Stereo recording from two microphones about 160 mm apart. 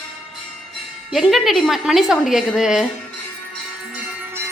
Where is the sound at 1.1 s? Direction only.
Centre (ahead or behind).